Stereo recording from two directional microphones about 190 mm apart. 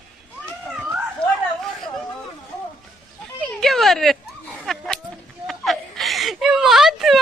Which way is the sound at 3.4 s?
Centre (ahead or behind).